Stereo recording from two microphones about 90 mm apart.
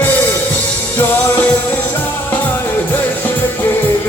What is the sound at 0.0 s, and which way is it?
Music, 20° left (ahead or behind).